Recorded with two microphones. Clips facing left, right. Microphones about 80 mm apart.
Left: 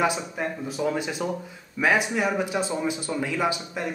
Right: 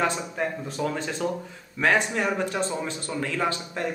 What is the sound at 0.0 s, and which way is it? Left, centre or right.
Speech, centre.